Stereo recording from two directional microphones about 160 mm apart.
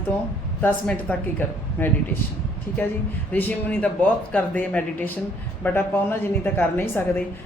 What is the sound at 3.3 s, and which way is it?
A woman's voice, 10° left (ahead or behind).